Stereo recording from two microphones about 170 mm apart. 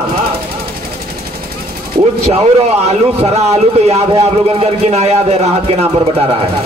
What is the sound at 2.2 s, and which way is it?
A man's voice, 40° right (ahead or behind).